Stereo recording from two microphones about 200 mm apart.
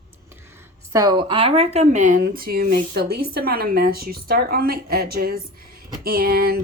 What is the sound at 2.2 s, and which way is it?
A woman's voice, 50° right (ahead or behind).